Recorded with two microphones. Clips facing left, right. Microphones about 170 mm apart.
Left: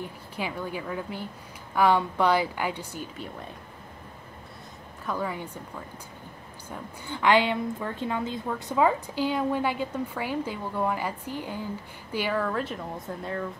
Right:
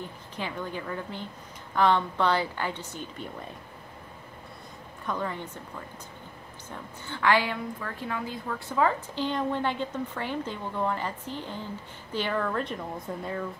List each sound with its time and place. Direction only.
0.4 s a woman's voice: 10° left (ahead or behind)
5.0 s a woman's voice: 10° left (ahead or behind)
7.1 s a woman's voice: 20° left (ahead or behind); by 13.5 s centre (ahead or behind)